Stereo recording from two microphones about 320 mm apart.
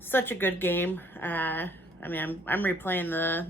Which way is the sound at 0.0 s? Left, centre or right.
Centre.